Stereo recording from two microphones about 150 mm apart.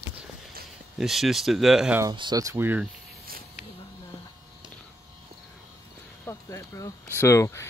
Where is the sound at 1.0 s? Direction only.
Centre (ahead or behind).